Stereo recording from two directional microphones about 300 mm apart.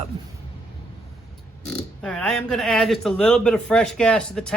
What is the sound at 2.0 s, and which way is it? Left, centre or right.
Speech, centre.